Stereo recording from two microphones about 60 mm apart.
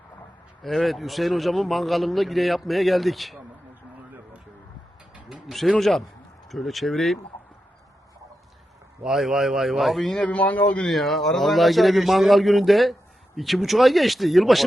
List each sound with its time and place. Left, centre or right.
0.6 s a man's voice: centre
5.3 s a man's voice: centre
9.0 s a man's voice: centre
10.2 s a man's voice: left
10.8 s a man's voice: centre